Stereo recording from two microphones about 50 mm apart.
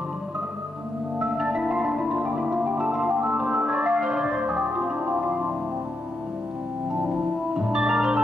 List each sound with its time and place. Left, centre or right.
1.2 s music: centre
2.8 s organ: centre
7.5 s organ: centre